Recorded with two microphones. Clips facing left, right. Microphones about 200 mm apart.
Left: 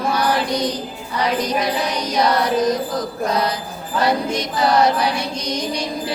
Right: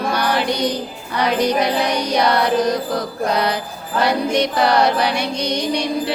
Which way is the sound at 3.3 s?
65° right (ahead or behind).